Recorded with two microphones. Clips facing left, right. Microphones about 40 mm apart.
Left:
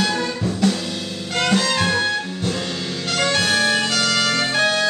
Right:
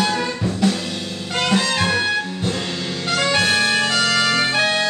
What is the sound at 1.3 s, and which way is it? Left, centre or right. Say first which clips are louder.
Music: even; centre.